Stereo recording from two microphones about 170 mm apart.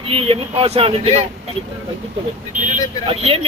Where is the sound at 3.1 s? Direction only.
35° right (ahead or behind).